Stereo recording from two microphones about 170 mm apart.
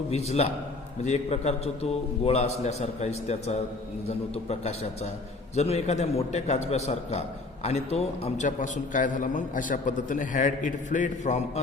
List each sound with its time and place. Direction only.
0.1 s a man's voice: 40° left (ahead or behind)